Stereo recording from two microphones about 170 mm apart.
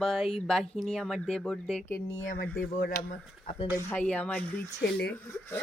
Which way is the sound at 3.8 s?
10° left (ahead or behind).